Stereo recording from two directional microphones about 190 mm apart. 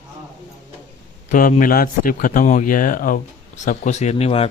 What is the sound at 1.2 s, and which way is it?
Speech, 45° left (ahead or behind).